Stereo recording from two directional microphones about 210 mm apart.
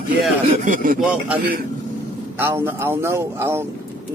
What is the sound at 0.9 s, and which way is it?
A man's voice, 5° right (ahead or behind).